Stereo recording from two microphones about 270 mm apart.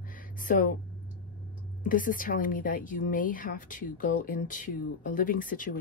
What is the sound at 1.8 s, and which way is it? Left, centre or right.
Speech, left.